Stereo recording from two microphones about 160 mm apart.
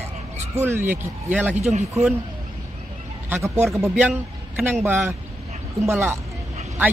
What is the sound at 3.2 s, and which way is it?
Speech, 15° right (ahead or behind).